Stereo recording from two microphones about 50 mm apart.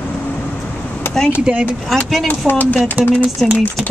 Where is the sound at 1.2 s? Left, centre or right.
Centre.